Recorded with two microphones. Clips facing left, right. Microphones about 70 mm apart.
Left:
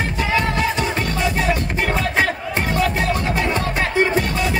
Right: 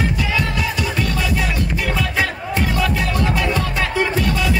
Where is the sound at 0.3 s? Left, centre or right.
Left.